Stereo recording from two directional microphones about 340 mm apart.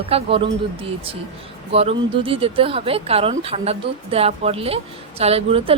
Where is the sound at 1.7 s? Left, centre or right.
Centre.